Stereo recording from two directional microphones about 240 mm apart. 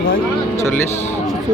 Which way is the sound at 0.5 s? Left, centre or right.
Centre.